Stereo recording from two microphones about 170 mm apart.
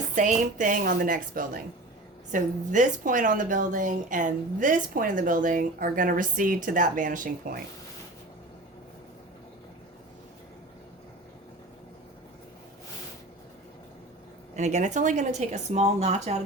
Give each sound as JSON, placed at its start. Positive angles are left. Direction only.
{"t": 0.2, "sound": "a woman's voice", "side_deg": -50}
{"t": 14.5, "sound": "a woman's voice", "side_deg": -45}